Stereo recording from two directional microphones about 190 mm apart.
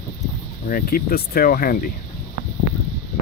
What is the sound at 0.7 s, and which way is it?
Speech, 50° left (ahead or behind).